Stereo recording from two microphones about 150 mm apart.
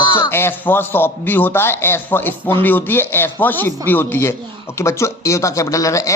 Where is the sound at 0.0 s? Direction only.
30° left (ahead or behind).